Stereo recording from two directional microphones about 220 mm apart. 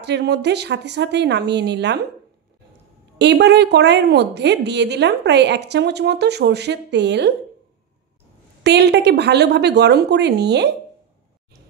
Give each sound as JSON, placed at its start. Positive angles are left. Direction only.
{"t": 0.0, "sound": "a woman's voice", "side_deg": -50}
{"t": 3.2, "sound": "a woman's voice", "side_deg": -50}
{"t": 8.6, "sound": "a woman's voice", "side_deg": -50}